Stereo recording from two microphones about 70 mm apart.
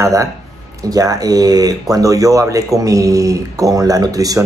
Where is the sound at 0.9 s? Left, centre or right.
Right.